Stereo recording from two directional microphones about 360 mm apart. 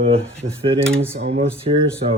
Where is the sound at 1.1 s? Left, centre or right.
Right.